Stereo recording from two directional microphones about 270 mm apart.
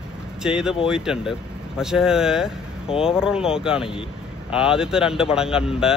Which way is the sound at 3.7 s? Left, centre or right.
Centre.